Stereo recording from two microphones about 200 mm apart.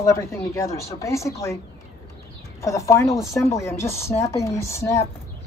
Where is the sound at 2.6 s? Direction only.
15° left (ahead or behind).